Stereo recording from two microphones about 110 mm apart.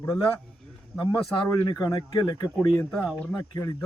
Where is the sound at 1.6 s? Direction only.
35° left (ahead or behind).